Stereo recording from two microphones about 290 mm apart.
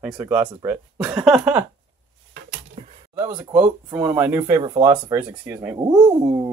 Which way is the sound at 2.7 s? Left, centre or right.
Right.